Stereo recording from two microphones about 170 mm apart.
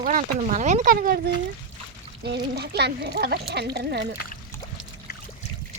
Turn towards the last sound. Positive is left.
turn(degrees=-75)  # may be behind; listen again after turning